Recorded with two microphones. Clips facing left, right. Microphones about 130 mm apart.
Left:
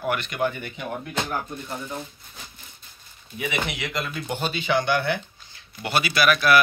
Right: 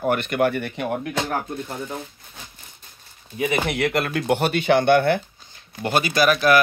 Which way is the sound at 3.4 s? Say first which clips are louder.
Right 6 dB; 40° right (ahead or behind).